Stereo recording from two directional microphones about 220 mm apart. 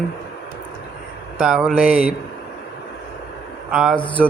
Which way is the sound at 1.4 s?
5° right (ahead or behind).